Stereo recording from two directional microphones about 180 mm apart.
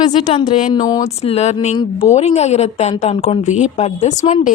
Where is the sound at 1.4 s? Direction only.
35° left (ahead or behind).